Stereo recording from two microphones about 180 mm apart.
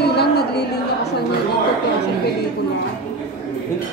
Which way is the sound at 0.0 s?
65° left (ahead or behind).